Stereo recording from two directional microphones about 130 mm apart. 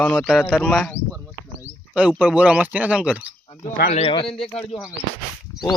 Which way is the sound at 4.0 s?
45° left (ahead or behind).